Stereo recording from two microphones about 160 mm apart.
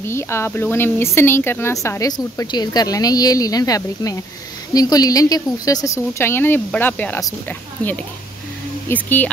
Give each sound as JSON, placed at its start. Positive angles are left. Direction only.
{"t": 0.0, "sound": "speech", "side_deg": 15}